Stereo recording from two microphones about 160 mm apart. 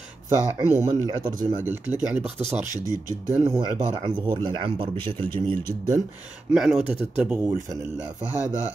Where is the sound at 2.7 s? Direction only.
20° left (ahead or behind).